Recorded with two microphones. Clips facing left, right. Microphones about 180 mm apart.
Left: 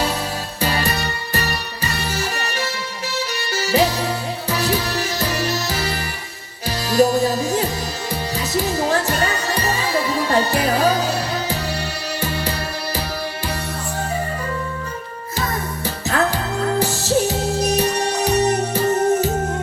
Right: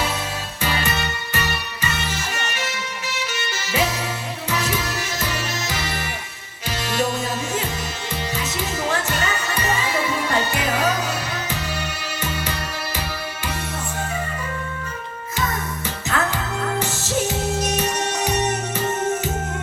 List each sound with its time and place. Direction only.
0.6 s music: 35° left (ahead or behind)
15.4 s music: 35° left (ahead or behind)